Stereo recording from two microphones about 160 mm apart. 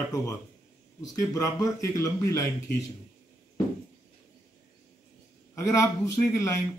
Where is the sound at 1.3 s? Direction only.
20° left (ahead or behind).